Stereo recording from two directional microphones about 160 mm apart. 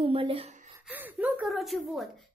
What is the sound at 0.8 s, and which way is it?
Speech, 10° right (ahead or behind).